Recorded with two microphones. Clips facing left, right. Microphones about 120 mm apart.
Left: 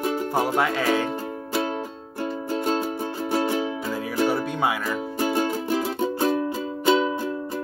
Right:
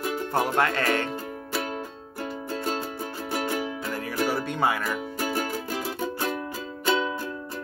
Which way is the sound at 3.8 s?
Centre (ahead or behind).